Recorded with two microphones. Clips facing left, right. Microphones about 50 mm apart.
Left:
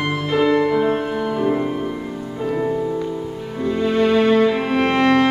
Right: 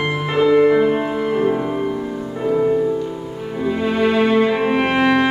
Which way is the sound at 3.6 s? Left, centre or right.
Centre.